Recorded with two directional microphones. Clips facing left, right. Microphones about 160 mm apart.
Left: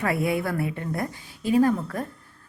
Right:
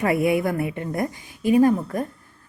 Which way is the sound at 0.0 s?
15° right (ahead or behind).